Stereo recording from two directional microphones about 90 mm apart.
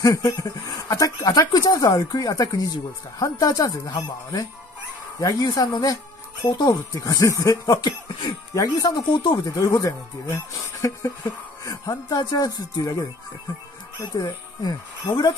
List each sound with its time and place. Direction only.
0.0 s speech: 40° left (ahead or behind)
9.5 s speech: 35° left (ahead or behind)
14.1 s speech: 50° left (ahead or behind)